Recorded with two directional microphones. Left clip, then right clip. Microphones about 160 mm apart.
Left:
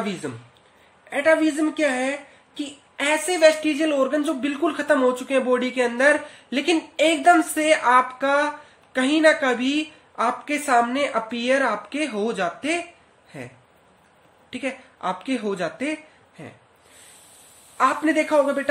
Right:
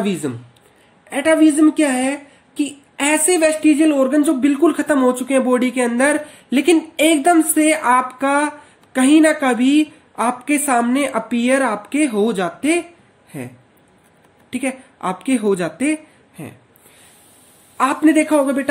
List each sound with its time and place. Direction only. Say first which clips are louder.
0.2 s a woman's voice: right 7 dB; 25° right (ahead or behind)
14.5 s a woman's voice: right 6 dB; 25° right (ahead or behind)
17.7 s a woman's voice: right 5 dB; 25° right (ahead or behind)